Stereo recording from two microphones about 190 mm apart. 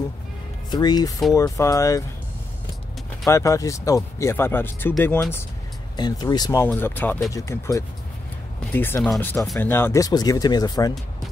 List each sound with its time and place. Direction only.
0.7 s speech: 20° left (ahead or behind)
3.3 s speech: 15° left (ahead or behind)